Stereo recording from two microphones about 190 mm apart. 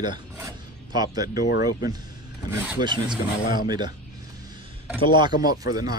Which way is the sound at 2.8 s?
25° right (ahead or behind).